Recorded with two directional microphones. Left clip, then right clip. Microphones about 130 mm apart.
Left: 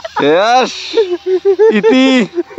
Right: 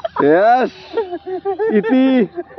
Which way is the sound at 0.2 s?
40° left (ahead or behind).